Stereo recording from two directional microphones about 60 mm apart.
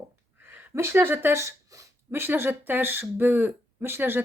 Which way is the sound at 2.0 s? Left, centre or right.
Right.